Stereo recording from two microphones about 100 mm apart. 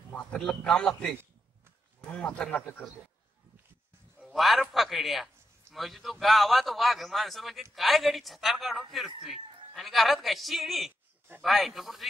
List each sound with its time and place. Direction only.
0.1 s a man's voice: 10° left (ahead or behind)
4.2 s a man's voice: centre (ahead or behind)